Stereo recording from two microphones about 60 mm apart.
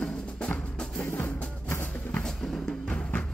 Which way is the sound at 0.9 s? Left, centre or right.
Left.